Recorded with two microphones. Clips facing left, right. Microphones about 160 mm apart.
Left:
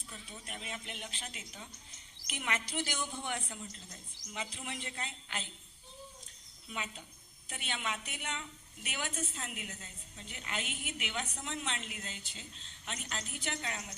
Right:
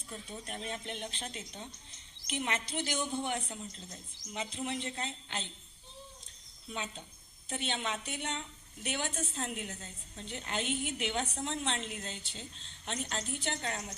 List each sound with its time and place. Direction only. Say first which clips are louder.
0.1 s a woman's voice: right 6 dB; 35° right (ahead or behind)
6.7 s a woman's voice: right 2 dB; 30° right (ahead or behind)